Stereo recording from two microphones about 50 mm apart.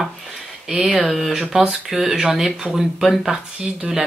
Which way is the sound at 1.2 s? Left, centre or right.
Centre.